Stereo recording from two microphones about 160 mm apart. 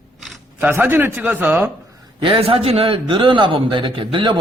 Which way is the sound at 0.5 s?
10° right (ahead or behind).